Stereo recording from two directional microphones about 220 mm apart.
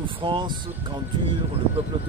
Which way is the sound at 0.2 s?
20° right (ahead or behind).